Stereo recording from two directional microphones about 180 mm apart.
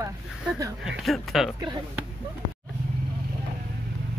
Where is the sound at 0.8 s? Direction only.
Centre (ahead or behind).